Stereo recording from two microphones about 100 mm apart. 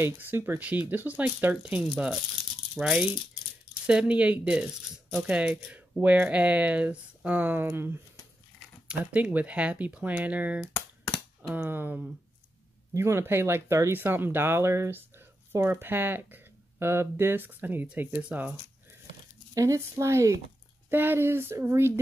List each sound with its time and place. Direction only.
0.0 s speech: 25° right (ahead or behind)
19.5 s speech: 35° right (ahead or behind)